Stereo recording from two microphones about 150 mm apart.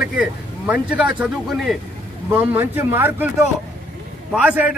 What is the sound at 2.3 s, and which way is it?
Speech, 15° right (ahead or behind).